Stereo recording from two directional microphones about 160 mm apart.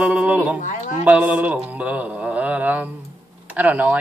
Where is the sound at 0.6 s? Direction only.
50° left (ahead or behind).